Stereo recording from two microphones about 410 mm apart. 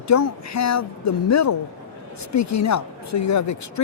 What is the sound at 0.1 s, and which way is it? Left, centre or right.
Speech, left.